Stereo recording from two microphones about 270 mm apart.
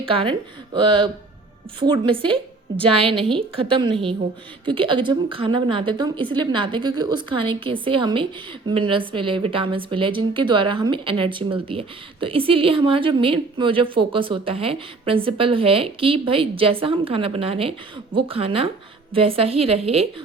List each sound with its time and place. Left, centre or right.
0.0 s a woman's voice: centre